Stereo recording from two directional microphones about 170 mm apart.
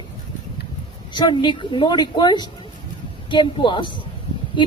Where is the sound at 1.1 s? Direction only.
25° left (ahead or behind).